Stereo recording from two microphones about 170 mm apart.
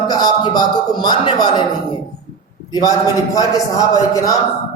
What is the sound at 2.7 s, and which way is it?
A woman's voice, 20° left (ahead or behind).